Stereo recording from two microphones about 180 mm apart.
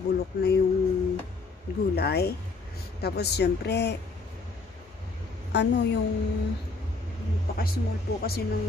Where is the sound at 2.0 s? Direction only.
65° left (ahead or behind).